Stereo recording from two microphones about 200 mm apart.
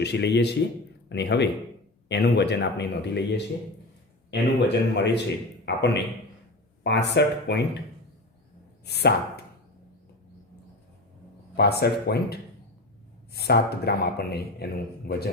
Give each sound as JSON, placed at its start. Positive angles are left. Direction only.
{"t": 0.0, "sound": "speech", "side_deg": 55}
{"t": 8.9, "sound": "speech", "side_deg": 55}
{"t": 11.5, "sound": "speech", "side_deg": 55}